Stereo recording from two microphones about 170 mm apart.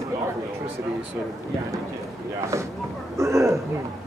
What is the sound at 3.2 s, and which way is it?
Speech, 15° right (ahead or behind).